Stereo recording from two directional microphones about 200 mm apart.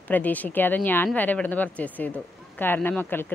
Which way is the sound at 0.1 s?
10° left (ahead or behind).